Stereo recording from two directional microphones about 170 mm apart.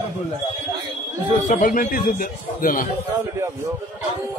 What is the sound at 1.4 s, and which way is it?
A man's voice, 50° left (ahead or behind).